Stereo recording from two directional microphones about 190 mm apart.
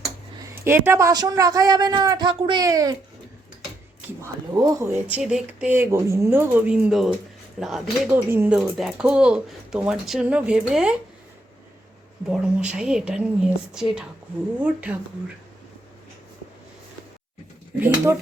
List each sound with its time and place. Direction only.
0.5 s a man's voice: 10° right (ahead or behind)
4.0 s speech: 15° right (ahead or behind)
12.3 s speech: 5° right (ahead or behind)
17.7 s speech: 10° right (ahead or behind)